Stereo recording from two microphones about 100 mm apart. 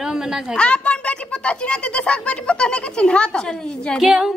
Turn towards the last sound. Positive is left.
turn(degrees=-5)  # may be behind; listen again after turning